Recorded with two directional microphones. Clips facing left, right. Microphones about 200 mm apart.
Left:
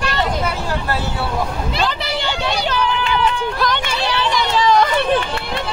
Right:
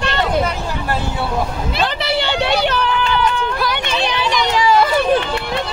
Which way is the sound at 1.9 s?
60° right (ahead or behind).